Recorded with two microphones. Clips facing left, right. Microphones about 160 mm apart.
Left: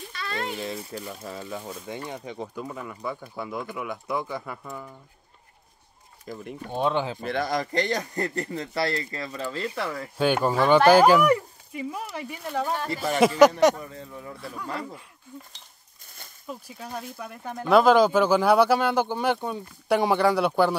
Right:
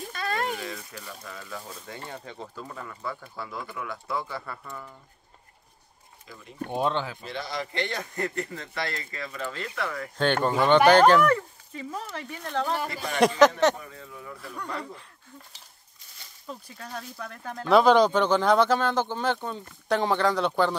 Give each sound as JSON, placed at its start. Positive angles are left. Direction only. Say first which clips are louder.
{"t": 0.0, "sound": "a sound", "louder": "right 3 dB", "side_deg": -45}
{"t": 0.6, "sound": "speech", "louder": "left 5 dB", "side_deg": 30}
{"t": 6.2, "sound": "speech", "louder": "left 11 dB", "side_deg": 45}
{"t": 6.8, "sound": "speech", "louder": "left 2 dB", "side_deg": 10}
{"t": 7.2, "sound": "a man's voice", "louder": "left 7 dB", "side_deg": 55}
{"t": 10.1, "sound": "speech", "louder": "left 2 dB", "side_deg": 10}
{"t": 13.2, "sound": "a sound", "louder": "left 2 dB", "side_deg": 5}
{"t": 16.4, "sound": "speech", "louder": "left 3 dB", "side_deg": 10}